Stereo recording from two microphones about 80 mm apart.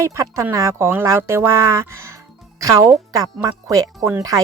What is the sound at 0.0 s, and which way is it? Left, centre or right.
Speech, right.